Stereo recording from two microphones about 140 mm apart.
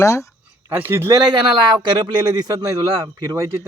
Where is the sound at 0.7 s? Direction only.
15° right (ahead or behind).